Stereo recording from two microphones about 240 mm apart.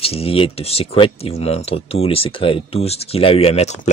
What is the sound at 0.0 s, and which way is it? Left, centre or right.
Speech, left.